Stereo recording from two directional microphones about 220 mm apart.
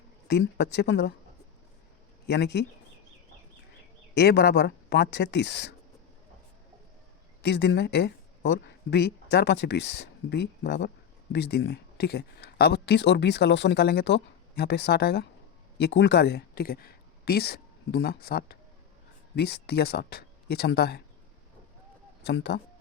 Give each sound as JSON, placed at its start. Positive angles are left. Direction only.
{"t": 0.3, "sound": "speech", "side_deg": 50}
{"t": 2.2, "sound": "speech", "side_deg": 50}
{"t": 4.1, "sound": "speech", "side_deg": 50}
{"t": 7.4, "sound": "speech", "side_deg": 50}
{"t": 22.2, "sound": "speech", "side_deg": 50}